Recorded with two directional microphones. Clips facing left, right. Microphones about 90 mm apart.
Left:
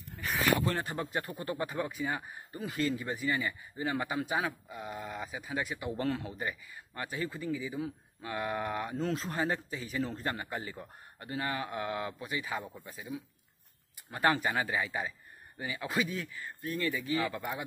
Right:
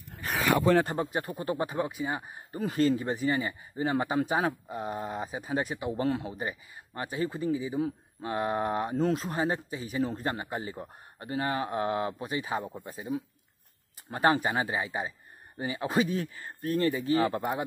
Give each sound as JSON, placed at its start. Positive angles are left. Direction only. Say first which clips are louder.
{"t": 0.2, "sound": "a sound", "louder": "right 3 dB", "side_deg": -40}
{"t": 1.3, "sound": "speech", "louder": "right 4 dB", "side_deg": -25}
{"t": 2.5, "sound": "a man's voice", "louder": "right 7 dB", "side_deg": -35}
{"t": 5.9, "sound": "a man's voice", "louder": "right 3 dB", "side_deg": -20}
{"t": 9.1, "sound": "speech", "louder": "right 3 dB", "side_deg": -20}
{"t": 14.1, "sound": "speech", "louder": "right 4 dB", "side_deg": -25}